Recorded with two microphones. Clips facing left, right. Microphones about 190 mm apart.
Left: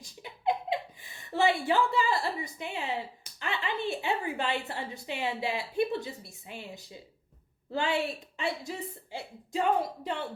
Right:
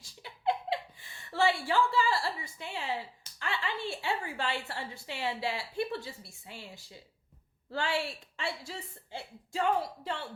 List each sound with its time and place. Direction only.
0.0 s speech: 15° left (ahead or behind)